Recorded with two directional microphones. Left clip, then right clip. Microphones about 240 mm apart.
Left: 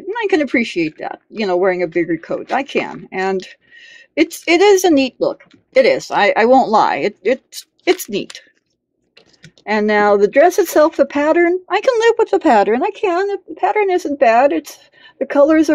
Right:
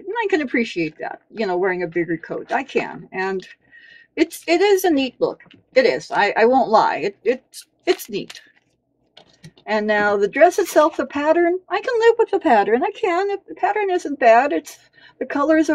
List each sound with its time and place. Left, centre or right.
0.1 s speech: left
9.7 s speech: left